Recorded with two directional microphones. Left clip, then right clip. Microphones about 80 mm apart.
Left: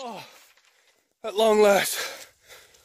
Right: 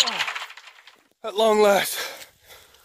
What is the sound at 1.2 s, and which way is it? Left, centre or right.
Speech, right.